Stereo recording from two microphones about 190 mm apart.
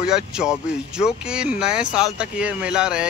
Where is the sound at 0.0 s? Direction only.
5° right (ahead or behind).